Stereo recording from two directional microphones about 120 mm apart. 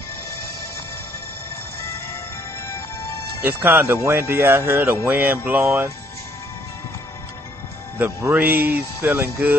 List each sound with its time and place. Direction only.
3.4 s speech: 15° right (ahead or behind)
7.9 s speech: 15° right (ahead or behind)